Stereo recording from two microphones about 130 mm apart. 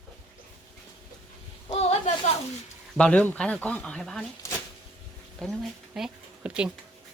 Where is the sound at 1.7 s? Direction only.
55° left (ahead or behind).